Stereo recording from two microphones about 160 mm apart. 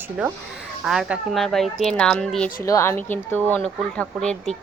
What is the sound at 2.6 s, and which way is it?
A woman's voice, 20° left (ahead or behind).